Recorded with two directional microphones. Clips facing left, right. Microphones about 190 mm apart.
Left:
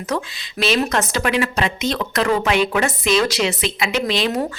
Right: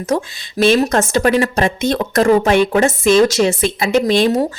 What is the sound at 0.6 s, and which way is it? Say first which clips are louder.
A woman's voice: right 6 dB; 45° right (ahead or behind).